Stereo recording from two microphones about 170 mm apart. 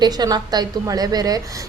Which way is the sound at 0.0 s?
25° right (ahead or behind).